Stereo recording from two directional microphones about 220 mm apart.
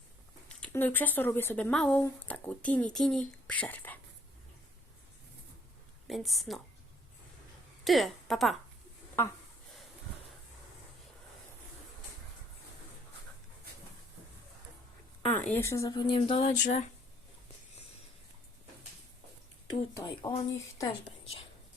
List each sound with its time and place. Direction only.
0.4 s speech: 5° left (ahead or behind)
6.1 s a woman's voice: centre (ahead or behind)
7.9 s a woman's voice: centre (ahead or behind)
15.3 s speech: 10° left (ahead or behind); by 16.9 s 35° left (ahead or behind)
20.0 s speech: 20° left (ahead or behind)
21.0 s a woman's voice: 25° left (ahead or behind)